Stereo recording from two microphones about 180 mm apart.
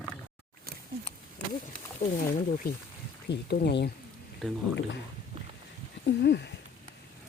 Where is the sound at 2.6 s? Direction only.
55° left (ahead or behind).